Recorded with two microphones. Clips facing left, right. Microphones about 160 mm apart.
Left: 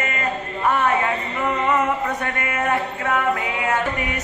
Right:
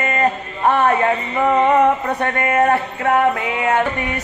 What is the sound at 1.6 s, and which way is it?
Mantra, 35° right (ahead or behind).